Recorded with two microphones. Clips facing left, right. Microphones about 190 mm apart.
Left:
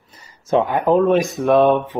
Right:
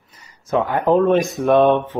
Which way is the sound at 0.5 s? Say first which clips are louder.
Left 1 dB; 20° left (ahead or behind).